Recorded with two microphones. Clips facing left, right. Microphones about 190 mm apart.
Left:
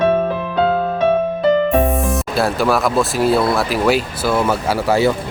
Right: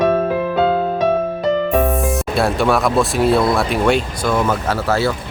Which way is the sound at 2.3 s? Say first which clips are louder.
Even; centre (ahead or behind).